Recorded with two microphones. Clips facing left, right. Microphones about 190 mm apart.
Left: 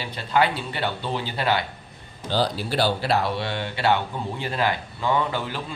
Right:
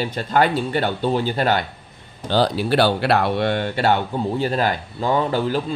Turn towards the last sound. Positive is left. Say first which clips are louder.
# right 6 dB
turn(degrees=-40)  # may be behind; listen again after turning